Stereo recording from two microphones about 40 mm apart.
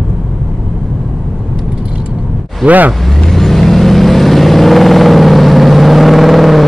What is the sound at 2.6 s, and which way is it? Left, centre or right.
Speech, right.